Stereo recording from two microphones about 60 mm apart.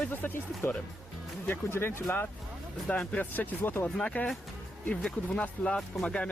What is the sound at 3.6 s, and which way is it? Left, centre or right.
Speech, left.